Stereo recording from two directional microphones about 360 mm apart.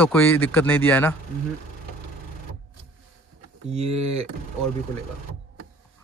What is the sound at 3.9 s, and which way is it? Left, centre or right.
Speech, right.